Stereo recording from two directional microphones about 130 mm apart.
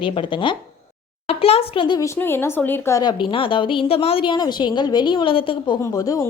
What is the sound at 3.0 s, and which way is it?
A woman's voice, 40° left (ahead or behind).